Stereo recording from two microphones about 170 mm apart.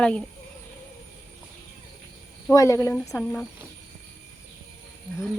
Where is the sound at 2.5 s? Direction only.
15° left (ahead or behind).